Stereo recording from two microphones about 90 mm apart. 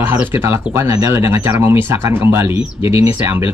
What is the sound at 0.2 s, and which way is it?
Speech, 30° right (ahead or behind).